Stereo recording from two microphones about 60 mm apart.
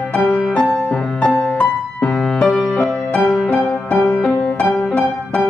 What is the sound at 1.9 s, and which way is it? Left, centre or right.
Music, centre.